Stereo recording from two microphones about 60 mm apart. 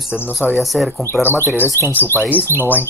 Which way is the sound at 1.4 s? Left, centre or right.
Left.